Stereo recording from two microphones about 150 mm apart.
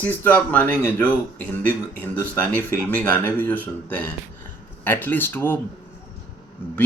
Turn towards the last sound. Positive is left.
turn(degrees=15)  # may be behind; listen again after turning